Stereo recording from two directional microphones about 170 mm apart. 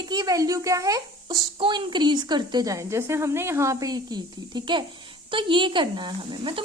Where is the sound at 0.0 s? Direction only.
25° right (ahead or behind).